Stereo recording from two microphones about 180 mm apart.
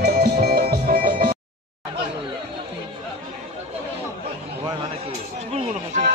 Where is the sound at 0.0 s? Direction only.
55° right (ahead or behind).